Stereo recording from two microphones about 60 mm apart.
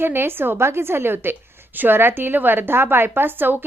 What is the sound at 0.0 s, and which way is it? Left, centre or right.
A woman's voice, right.